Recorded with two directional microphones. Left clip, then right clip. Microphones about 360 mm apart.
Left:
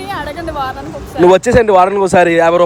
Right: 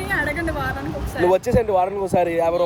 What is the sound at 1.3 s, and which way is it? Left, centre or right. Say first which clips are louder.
Speech: left 10 dB; left.